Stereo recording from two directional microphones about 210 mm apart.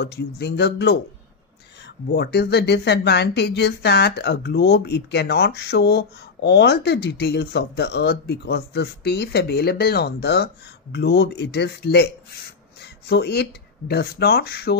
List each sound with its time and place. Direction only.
0.0 s speech: 50° left (ahead or behind)